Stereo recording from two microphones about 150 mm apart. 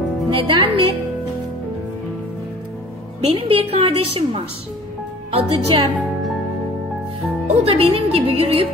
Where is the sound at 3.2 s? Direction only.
40° right (ahead or behind).